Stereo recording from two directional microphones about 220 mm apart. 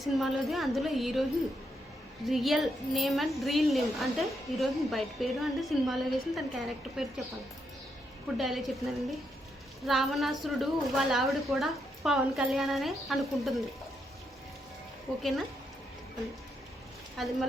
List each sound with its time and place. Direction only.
0.0 s a woman's voice: centre (ahead or behind)
2.2 s a woman's voice: centre (ahead or behind)
8.4 s a woman's voice: centre (ahead or behind)
17.2 s a woman's voice: centre (ahead or behind)